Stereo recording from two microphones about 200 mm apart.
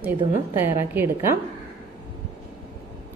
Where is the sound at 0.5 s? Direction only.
10° right (ahead or behind).